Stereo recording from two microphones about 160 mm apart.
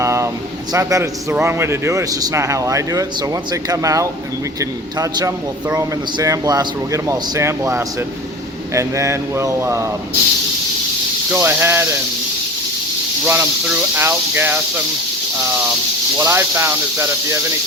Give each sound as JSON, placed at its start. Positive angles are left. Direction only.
{"t": 0.0, "sound": "a sound", "side_deg": -20}
{"t": 0.7, "sound": "a man's voice", "side_deg": -20}
{"t": 11.3, "sound": "speech", "side_deg": -15}
{"t": 13.2, "sound": "speech", "side_deg": -15}
{"t": 16.1, "sound": "speech", "side_deg": -15}